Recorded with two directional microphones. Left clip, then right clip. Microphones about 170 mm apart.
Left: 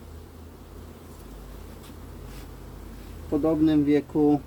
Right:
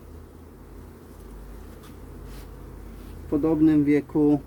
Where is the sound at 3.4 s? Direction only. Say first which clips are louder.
Right 2 dB; 30° right (ahead or behind).